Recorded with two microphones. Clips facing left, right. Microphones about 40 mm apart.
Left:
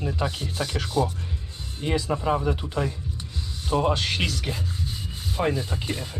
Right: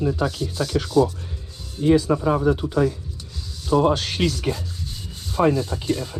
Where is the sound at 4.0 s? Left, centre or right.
Left.